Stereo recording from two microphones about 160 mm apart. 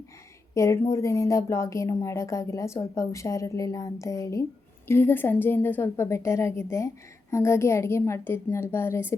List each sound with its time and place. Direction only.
0.5 s a woman's voice: 20° left (ahead or behind)